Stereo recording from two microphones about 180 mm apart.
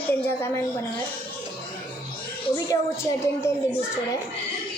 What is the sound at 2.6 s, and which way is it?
Speech, 15° left (ahead or behind).